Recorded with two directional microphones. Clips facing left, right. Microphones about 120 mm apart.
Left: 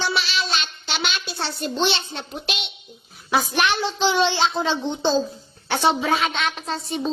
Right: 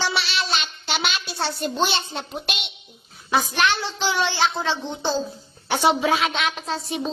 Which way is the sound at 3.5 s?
15° left (ahead or behind).